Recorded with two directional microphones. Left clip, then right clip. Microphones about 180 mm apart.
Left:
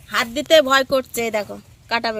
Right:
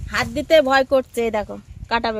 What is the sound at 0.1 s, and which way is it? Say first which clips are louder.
Speech: left 1 dB; 20° right (ahead or behind).